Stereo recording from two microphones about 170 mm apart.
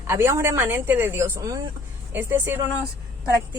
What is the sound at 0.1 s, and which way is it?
A woman's voice, 15° right (ahead or behind).